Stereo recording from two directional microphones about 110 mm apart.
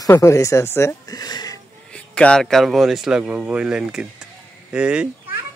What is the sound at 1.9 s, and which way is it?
A child's voice, 10° left (ahead or behind).